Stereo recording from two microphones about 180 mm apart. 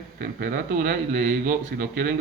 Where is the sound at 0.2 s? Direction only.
55° right (ahead or behind).